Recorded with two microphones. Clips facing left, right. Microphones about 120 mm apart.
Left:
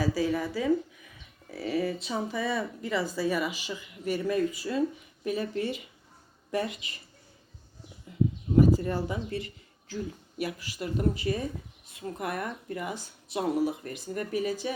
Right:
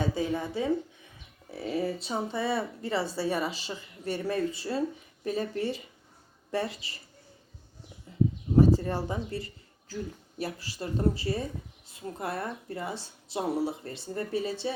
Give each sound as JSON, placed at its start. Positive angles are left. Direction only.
{"t": 0.0, "sound": "speech", "side_deg": -25}
{"t": 8.5, "sound": "speech", "side_deg": -30}